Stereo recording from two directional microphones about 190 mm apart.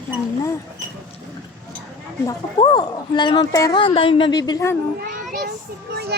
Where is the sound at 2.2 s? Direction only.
25° left (ahead or behind).